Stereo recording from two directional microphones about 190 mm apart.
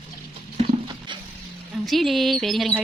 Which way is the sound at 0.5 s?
30° right (ahead or behind).